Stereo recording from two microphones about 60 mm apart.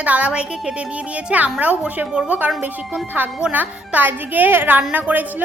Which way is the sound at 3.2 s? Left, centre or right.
Right.